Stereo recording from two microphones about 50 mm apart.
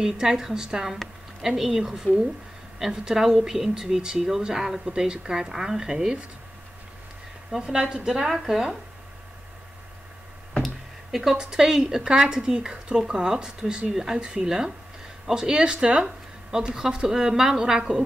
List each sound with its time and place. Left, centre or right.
0.0 s a woman's voice: centre
7.5 s a woman's voice: centre
10.5 s a sound: centre
11.3 s a woman's voice: centre